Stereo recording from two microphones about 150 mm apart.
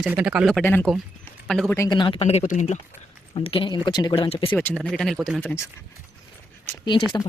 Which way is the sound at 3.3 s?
35° left (ahead or behind).